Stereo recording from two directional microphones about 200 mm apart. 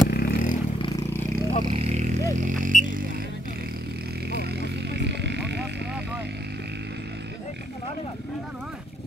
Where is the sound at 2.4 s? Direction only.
40° right (ahead or behind).